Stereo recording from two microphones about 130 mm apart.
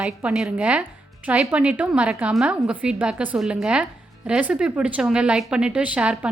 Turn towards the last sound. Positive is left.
turn(degrees=-10)  # may be behind; listen again after turning